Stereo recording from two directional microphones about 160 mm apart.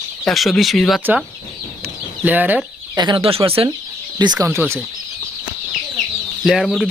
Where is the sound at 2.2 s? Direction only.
10° right (ahead or behind).